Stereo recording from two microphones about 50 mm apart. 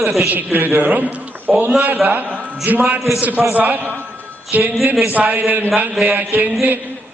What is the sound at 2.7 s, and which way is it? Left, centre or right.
A man's voice, right.